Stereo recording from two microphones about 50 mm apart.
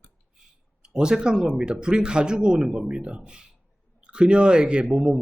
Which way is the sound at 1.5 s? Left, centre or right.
Centre.